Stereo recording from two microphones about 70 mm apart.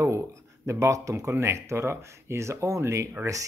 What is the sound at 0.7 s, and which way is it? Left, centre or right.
Speech, right.